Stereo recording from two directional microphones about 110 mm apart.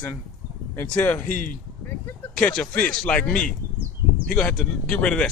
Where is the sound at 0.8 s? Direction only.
10° left (ahead or behind).